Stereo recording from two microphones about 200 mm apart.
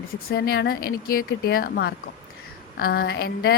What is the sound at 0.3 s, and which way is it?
A woman's voice, 50° left (ahead or behind).